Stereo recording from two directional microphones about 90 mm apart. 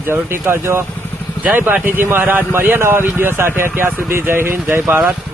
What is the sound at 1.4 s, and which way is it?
Speech, 15° right (ahead or behind).